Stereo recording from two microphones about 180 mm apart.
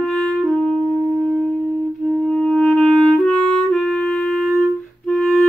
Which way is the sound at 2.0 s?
5° left (ahead or behind).